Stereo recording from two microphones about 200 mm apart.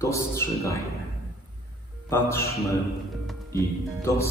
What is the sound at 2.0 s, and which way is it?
Speech, 15° left (ahead or behind).